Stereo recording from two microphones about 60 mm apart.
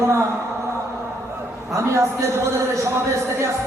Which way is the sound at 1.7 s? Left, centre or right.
Right.